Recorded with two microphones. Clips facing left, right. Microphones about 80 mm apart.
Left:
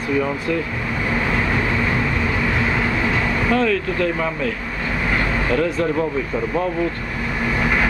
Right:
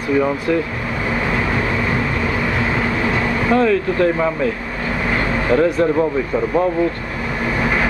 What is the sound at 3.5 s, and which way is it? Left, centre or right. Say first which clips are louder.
Speech: right 5 dB; right.